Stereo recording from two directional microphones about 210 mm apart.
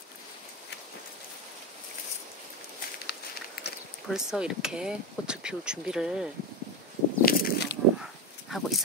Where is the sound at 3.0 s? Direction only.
50° left (ahead or behind).